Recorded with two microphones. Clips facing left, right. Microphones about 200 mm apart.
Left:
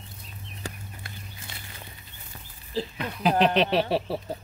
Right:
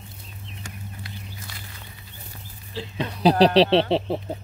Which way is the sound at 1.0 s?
50° left (ahead or behind).